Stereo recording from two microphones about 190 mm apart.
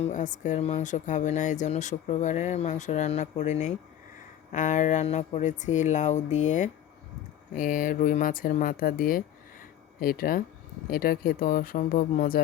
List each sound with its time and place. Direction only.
0.0 s speech: 40° left (ahead or behind)